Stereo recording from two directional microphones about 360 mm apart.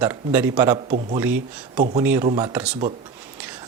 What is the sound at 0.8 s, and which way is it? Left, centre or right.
A man's voice, centre.